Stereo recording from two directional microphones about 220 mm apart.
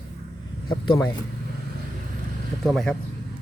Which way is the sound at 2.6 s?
Centre (ahead or behind).